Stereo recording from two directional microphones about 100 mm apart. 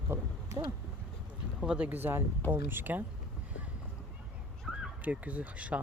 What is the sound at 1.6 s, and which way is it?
Speech, 10° right (ahead or behind).